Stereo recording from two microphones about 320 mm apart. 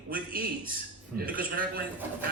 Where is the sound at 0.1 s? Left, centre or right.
Right.